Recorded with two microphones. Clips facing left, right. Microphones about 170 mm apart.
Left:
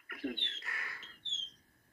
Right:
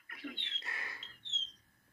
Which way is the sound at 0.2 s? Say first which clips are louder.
Left 7 dB; 50° left (ahead or behind).